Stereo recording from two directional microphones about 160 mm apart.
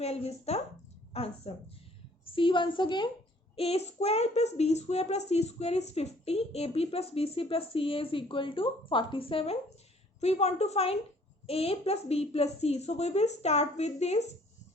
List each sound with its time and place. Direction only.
0.0 s a child's voice: 40° left (ahead or behind)